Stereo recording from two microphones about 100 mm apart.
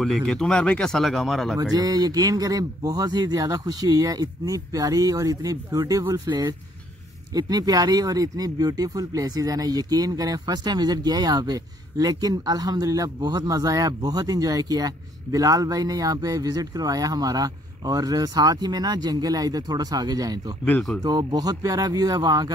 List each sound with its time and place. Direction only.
0.0 s speech: 5° left (ahead or behind)
1.6 s speech: 40° right (ahead or behind)